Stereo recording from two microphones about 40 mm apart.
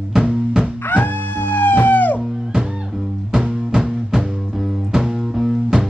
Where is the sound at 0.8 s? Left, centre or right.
Left.